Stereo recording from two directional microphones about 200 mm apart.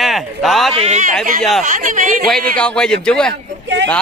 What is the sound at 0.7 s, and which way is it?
Speech, 35° right (ahead or behind).